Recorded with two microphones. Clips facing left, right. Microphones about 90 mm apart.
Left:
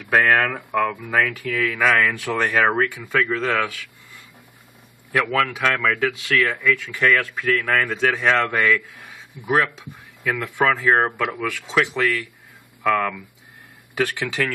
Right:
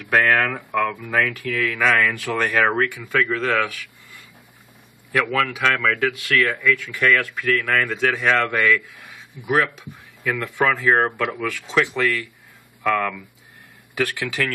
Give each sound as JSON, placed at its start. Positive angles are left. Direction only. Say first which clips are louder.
{"t": 0.1, "sound": "speech", "louder": "left 1 dB", "side_deg": 5}
{"t": 5.1, "sound": "speech", "louder": "even", "side_deg": 5}